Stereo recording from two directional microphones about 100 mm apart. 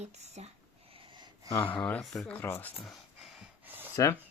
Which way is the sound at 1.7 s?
15° left (ahead or behind).